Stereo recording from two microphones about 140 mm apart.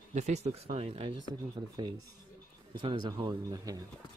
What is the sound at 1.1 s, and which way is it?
Speech, 30° right (ahead or behind).